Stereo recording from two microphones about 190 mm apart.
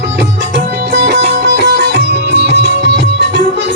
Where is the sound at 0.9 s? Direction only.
65° right (ahead or behind).